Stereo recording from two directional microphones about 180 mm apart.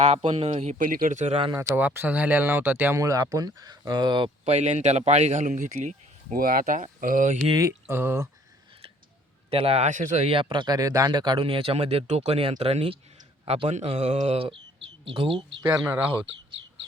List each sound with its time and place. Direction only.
0.0 s speech: 35° right (ahead or behind)
1.7 s speech: 10° right (ahead or behind)
4.4 s speech: 40° right (ahead or behind)
7.6 s speech: 15° right (ahead or behind)
9.5 s speech: 35° right (ahead or behind)
15.6 s speech: 10° right (ahead or behind)